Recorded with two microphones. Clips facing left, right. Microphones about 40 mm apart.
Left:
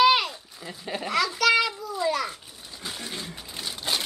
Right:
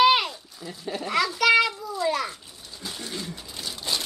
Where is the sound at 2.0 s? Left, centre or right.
Centre.